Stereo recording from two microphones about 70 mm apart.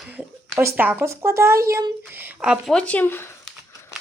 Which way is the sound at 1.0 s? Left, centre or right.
Right.